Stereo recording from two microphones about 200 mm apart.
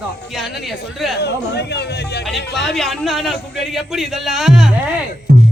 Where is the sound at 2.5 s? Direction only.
Centre (ahead or behind).